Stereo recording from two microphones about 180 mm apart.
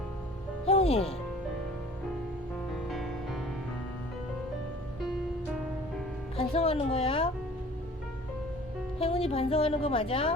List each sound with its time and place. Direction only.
0.7 s music: 35° left (ahead or behind)
2.9 s music: centre (ahead or behind)
6.3 s a woman's voice: 35° left (ahead or behind)
9.0 s a woman's voice: 30° left (ahead or behind)